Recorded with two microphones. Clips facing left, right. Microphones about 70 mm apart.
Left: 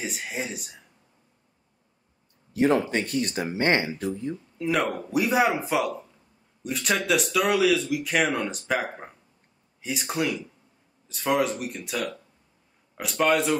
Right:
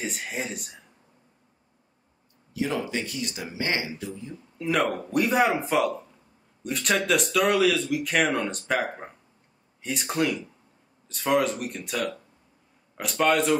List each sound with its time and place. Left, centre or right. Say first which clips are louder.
0.0 s speech: even; centre
2.5 s speech: left 6 dB; left
4.6 s speech: right 1 dB; centre